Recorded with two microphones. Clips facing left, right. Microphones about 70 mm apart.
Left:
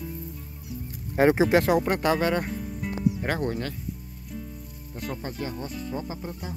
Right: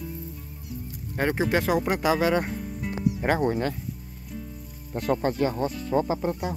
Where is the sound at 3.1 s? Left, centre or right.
Centre.